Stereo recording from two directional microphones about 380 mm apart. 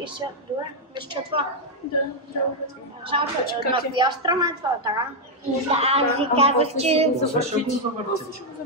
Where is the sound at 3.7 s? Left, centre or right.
Centre.